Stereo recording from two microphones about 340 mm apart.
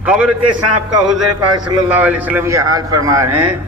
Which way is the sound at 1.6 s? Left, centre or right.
Centre.